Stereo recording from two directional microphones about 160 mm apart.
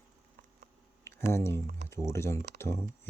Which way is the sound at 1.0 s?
15° left (ahead or behind).